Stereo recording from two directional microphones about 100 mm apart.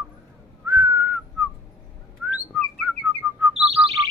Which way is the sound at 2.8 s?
10° right (ahead or behind).